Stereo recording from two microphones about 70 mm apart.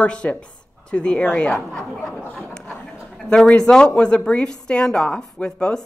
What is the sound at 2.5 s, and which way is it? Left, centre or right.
A man's voice, centre.